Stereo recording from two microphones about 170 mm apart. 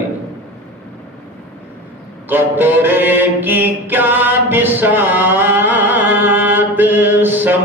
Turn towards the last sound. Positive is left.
turn(degrees=-10)  # may be behind; listen again after turning